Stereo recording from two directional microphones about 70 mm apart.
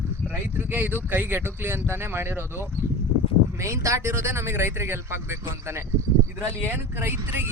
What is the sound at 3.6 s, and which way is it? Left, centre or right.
Speech, right.